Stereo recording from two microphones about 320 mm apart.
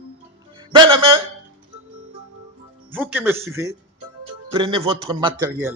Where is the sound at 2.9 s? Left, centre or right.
Centre.